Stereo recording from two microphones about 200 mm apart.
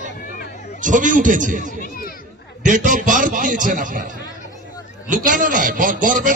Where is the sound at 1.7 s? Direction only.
45° left (ahead or behind).